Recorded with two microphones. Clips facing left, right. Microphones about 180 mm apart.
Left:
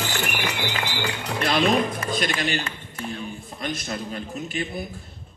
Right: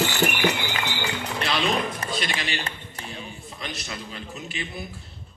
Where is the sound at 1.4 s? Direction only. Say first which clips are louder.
Left 5 dB; 45° left (ahead or behind).